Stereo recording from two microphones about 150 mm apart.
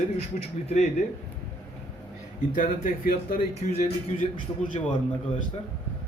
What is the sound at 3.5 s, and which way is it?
Speech, 50° left (ahead or behind).